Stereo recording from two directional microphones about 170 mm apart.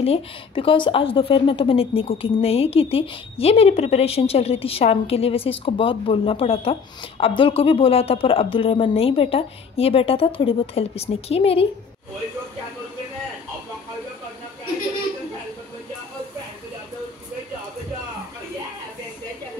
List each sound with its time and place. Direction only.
0.0 s a woman's voice: 35° left (ahead or behind)